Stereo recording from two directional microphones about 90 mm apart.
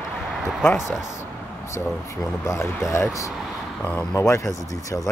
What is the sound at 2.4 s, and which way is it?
Speech, 30° left (ahead or behind).